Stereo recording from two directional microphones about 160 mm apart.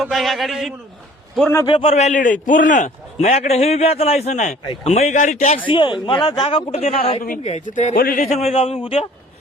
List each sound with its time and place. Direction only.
0.0 s a man's voice: centre (ahead or behind)
1.4 s a man's voice: 10° left (ahead or behind)
1.6 s a man's voice: 35° left (ahead or behind); by 5.5 s 50° left (ahead or behind)
5.7 s a man's voice: 30° left (ahead or behind)
7.4 s a man's voice: 50° left (ahead or behind)
7.9 s a man's voice: 60° left (ahead or behind); by 9.0 s 35° left (ahead or behind)